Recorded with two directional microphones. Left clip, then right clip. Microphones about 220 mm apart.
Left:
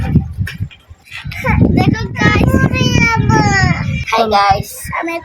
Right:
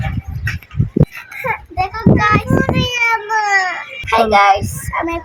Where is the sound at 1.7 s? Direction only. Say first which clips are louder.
Right 1 dB; 10° left (ahead or behind).